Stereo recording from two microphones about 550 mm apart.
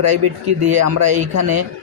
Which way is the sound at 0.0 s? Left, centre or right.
Right.